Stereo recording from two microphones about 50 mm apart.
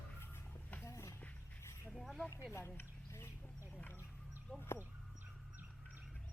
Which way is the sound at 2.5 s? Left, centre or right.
Left.